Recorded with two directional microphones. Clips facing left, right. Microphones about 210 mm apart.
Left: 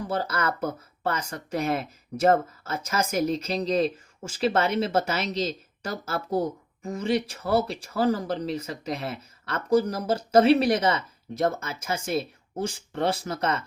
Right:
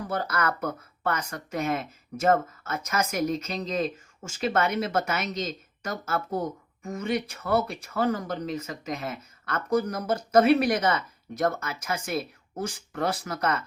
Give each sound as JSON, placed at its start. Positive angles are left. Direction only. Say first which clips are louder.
{"t": 0.1, "sound": "speech", "louder": "even", "side_deg": 30}